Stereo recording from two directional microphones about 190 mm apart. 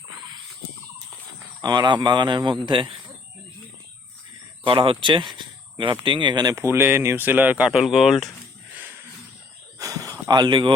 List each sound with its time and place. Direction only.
1.6 s speech: 20° right (ahead or behind)
4.6 s speech: 25° right (ahead or behind); by 8.3 s centre (ahead or behind)
9.7 s a sound: 15° right (ahead or behind)